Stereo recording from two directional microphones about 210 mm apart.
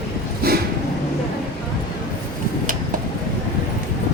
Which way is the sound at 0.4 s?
45° right (ahead or behind).